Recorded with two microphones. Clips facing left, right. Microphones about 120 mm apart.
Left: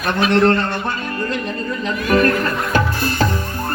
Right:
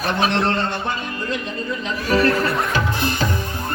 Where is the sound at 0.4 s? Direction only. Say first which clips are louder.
Left 5 dB; 50° left (ahead or behind).